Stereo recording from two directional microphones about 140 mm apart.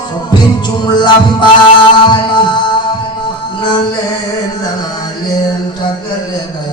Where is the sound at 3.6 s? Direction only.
35° left (ahead or behind).